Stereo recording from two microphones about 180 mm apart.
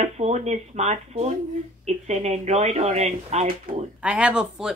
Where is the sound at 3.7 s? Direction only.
50° right (ahead or behind).